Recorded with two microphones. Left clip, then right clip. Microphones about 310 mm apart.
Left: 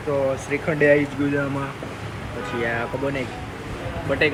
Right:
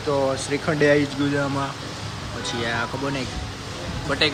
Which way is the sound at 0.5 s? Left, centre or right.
Centre.